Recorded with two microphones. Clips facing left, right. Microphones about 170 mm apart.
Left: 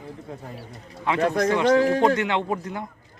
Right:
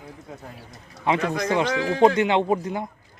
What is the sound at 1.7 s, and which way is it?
Speech, 45° left (ahead or behind).